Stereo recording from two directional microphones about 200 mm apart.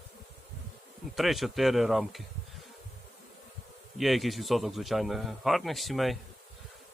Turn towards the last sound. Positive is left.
turn(degrees=0)  # may be behind; listen again after turning